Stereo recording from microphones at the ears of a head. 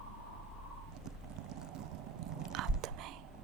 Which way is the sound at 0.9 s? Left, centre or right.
Right.